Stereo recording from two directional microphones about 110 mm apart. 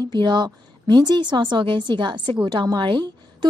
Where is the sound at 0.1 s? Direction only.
45° right (ahead or behind).